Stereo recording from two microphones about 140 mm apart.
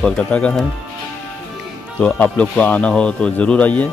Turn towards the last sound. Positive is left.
turn(degrees=10)  # may be behind; listen again after turning